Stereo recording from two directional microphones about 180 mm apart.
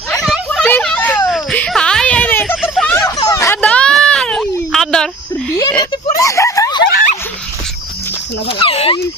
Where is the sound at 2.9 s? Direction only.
15° left (ahead or behind).